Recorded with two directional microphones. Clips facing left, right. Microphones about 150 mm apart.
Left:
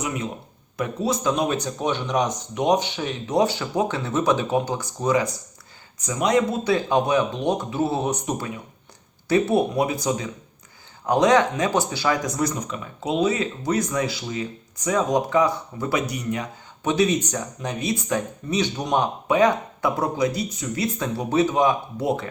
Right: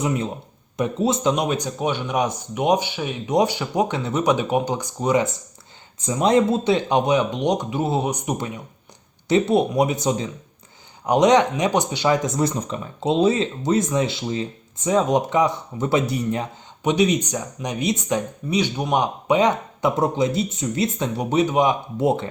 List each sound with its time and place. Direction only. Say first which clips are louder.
0.8 s speech: right 3 dB; 20° right (ahead or behind)
16.8 s speech: right 2 dB; 15° right (ahead or behind)
19.3 s speech: even; 20° right (ahead or behind)